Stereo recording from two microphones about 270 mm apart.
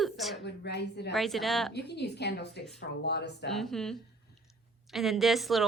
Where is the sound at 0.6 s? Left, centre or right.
Left.